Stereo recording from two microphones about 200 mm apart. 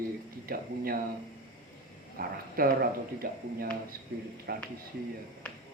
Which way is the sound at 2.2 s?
50° right (ahead or behind).